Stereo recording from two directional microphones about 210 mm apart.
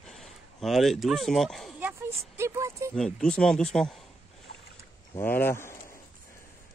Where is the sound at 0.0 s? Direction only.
Centre (ahead or behind).